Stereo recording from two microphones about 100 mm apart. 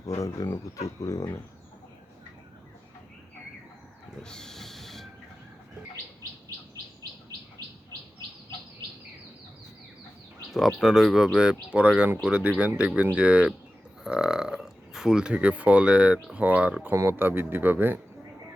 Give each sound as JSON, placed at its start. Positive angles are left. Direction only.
{"t": 0.2, "sound": "speech", "side_deg": 30}
{"t": 4.2, "sound": "train", "side_deg": 5}
{"t": 10.5, "sound": "speech", "side_deg": 0}
{"t": 16.9, "sound": "speech", "side_deg": -25}